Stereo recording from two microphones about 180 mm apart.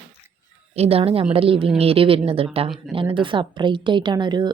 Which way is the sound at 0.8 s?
35° right (ahead or behind).